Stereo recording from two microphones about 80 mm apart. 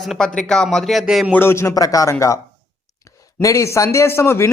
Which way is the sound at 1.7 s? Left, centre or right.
Left.